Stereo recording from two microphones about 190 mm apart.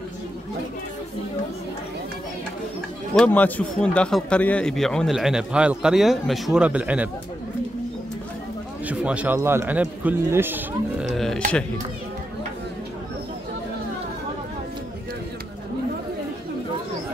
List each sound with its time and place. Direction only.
3.2 s a man's voice: 10° left (ahead or behind); by 7.1 s 5° right (ahead or behind)
8.8 s a man's voice: 5° right (ahead or behind)
11.1 s burping: centre (ahead or behind)